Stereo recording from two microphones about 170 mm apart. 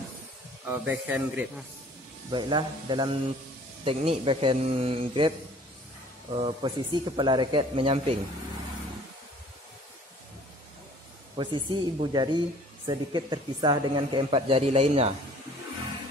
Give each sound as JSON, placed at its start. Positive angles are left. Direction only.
{"t": 0.7, "sound": "speech", "side_deg": -10}
{"t": 2.3, "sound": "speech", "side_deg": -25}
{"t": 6.3, "sound": "speech", "side_deg": -30}
{"t": 11.3, "sound": "speech", "side_deg": -25}